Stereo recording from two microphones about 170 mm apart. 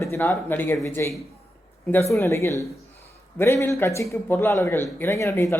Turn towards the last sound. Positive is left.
turn(degrees=15)  # may be behind; listen again after turning